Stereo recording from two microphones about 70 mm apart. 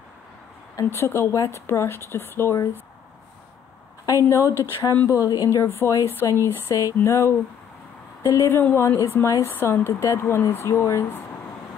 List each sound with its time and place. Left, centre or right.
0.8 s speech: left
4.2 s a woman's voice: left
5.8 s speech: left
6.7 s a woman's voice: left
7.0 s a woman's voice: left